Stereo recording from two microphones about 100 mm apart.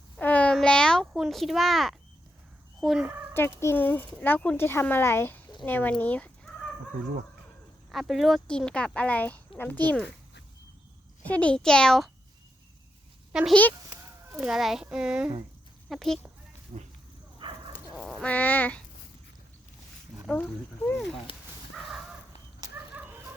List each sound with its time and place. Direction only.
0.2 s a sound: 15° left (ahead or behind)
1.2 s a child's voice: centre (ahead or behind)
3.6 s a child's voice: 25° left (ahead or behind)
7.9 s a child's voice: centre (ahead or behind)
8.4 s speech: 10° left (ahead or behind)
11.2 s speech: 15° left (ahead or behind)
13.5 s speech: 15° left (ahead or behind)
14.4 s a child's voice: 5° right (ahead or behind)
15.9 s a child's voice: centre (ahead or behind)
16.7 s speech: 90° right
17.4 s bow-wow: 55° right (ahead or behind)
18.0 s a sound: 10° left (ahead or behind)
20.2 s speech: 10° left (ahead or behind)
23.0 s chicken: 20° right (ahead or behind)